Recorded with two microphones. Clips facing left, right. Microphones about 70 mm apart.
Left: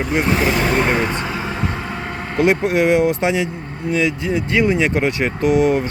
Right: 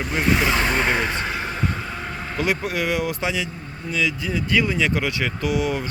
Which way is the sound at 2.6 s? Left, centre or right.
Left.